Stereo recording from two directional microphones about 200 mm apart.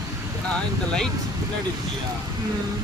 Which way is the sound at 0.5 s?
5° left (ahead or behind).